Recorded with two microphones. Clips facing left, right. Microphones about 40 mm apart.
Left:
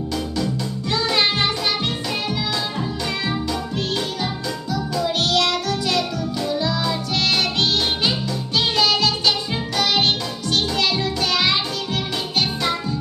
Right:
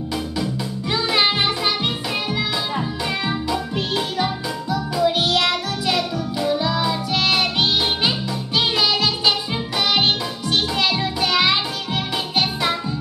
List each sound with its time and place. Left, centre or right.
0.9 s music: centre
3.3 s music: centre
8.5 s music: centre
10.5 s music: centre